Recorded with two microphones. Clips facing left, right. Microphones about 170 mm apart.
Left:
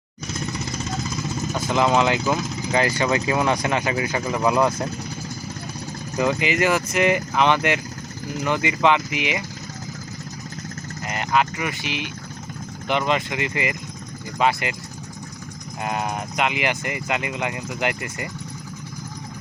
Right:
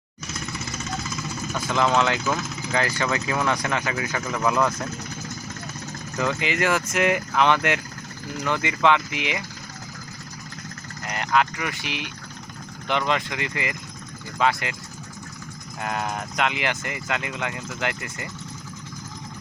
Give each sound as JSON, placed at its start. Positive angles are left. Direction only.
{"t": 1.5, "sound": "speech", "side_deg": 15}
{"t": 6.1, "sound": "speech", "side_deg": 15}
{"t": 6.5, "sound": "speech", "side_deg": 0}
{"t": 11.0, "sound": "speech", "side_deg": 5}
{"t": 15.8, "sound": "speech", "side_deg": 15}